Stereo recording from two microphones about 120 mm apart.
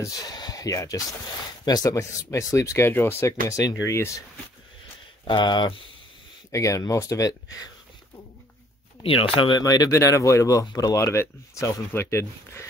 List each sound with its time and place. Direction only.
0.0 s speech: 35° left (ahead or behind)
5.2 s speech: 35° left (ahead or behind)
6.5 s speech: 25° left (ahead or behind)
9.0 s speech: 50° left (ahead or behind)
9.6 s speech: 30° left (ahead or behind)